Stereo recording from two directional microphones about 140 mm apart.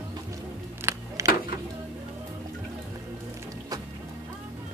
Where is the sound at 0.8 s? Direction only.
20° right (ahead or behind).